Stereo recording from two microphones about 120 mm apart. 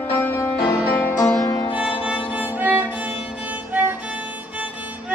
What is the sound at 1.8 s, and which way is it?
Music, 10° right (ahead or behind).